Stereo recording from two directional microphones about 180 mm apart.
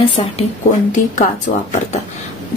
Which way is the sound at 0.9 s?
45° left (ahead or behind).